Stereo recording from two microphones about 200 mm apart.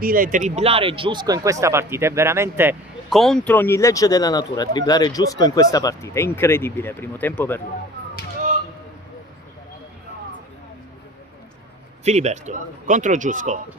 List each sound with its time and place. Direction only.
0.0 s speech: 45° right (ahead or behind); by 2.7 s 10° right (ahead or behind)
3.1 s speech: centre (ahead or behind)
12.0 s speech: 35° right (ahead or behind)